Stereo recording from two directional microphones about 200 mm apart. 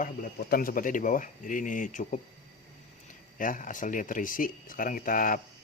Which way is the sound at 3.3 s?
40° left (ahead or behind).